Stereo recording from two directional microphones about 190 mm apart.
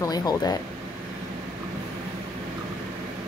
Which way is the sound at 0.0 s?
20° left (ahead or behind).